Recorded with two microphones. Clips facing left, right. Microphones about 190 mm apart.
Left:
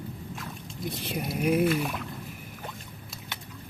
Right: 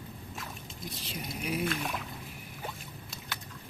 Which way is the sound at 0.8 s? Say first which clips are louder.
Left 9 dB; 55° left (ahead or behind).